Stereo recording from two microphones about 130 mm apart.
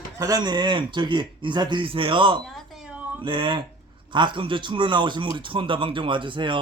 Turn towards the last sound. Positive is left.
turn(degrees=-40)  # may be behind; listen again after turning